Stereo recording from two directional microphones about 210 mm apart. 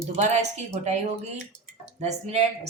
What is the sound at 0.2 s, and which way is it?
Speech, 35° right (ahead or behind).